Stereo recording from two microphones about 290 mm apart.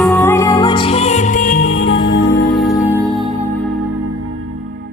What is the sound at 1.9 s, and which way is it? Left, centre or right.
Music, left.